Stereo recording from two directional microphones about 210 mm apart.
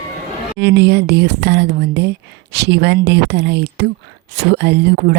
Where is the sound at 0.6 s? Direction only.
55° right (ahead or behind).